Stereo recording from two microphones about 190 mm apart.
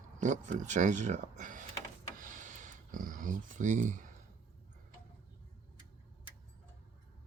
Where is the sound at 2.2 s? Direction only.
40° right (ahead or behind).